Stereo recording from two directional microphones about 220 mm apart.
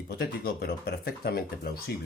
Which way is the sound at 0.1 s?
45° left (ahead or behind).